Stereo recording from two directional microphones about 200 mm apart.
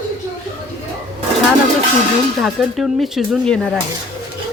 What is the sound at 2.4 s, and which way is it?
Speech, centre (ahead or behind).